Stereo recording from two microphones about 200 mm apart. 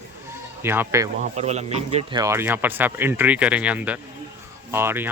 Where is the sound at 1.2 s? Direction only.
35° right (ahead or behind).